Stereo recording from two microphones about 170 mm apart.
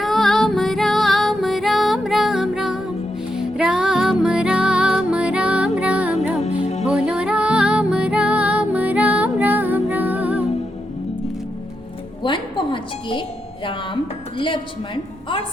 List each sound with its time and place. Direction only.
0.0 s music: centre (ahead or behind)
6.6 s music: 40° left (ahead or behind)
6.8 s music: 5° right (ahead or behind)
12.2 s music: 30° left (ahead or behind)
13.7 s speech: 30° left (ahead or behind)